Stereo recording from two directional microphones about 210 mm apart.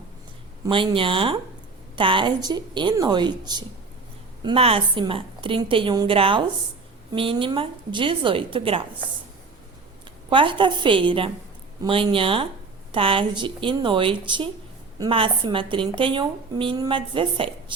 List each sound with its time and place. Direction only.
0.7 s speech: 25° right (ahead or behind)
10.2 s speech: 25° right (ahead or behind)